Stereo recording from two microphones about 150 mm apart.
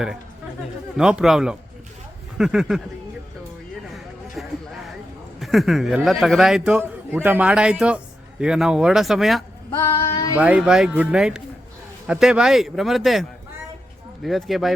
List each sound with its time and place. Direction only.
0.9 s a man's voice: 5° right (ahead or behind)
4.4 s a man's voice: centre (ahead or behind)